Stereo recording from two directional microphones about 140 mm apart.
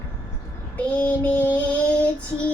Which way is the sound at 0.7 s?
10° left (ahead or behind).